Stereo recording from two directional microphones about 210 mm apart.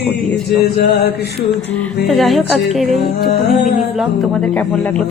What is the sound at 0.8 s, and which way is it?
Music, 50° left (ahead or behind).